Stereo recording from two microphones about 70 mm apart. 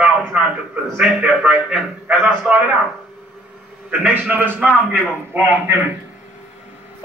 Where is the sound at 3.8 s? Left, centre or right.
Right.